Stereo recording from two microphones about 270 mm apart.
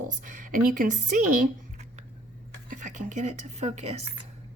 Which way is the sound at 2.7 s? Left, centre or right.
Right.